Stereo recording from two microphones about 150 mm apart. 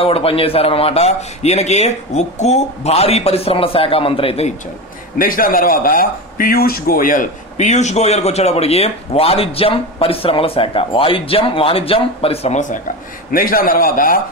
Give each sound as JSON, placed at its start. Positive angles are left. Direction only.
{"t": 0.0, "sound": "speech", "side_deg": 40}
{"t": 5.2, "sound": "speech", "side_deg": 70}
{"t": 13.3, "sound": "a man's voice", "side_deg": 70}